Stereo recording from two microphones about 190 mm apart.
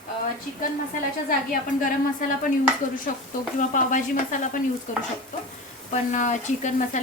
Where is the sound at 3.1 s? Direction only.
45° left (ahead or behind).